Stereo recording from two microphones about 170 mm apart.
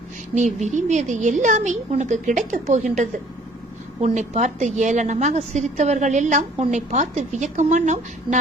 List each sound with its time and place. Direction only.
0.3 s a woman's voice: 45° right (ahead or behind)
4.0 s a woman's voice: 45° right (ahead or behind)